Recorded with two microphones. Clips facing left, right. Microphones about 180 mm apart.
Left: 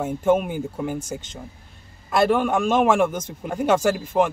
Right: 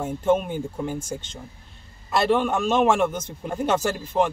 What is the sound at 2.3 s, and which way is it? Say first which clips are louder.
Speech: left 1 dB; 10° left (ahead or behind).